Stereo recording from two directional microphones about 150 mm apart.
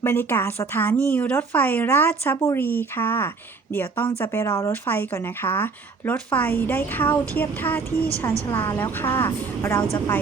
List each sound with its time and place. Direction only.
0.0 s speech: 15° left (ahead or behind)